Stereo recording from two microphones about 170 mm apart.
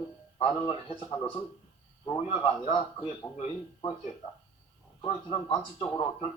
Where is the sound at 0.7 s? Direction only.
30° left (ahead or behind).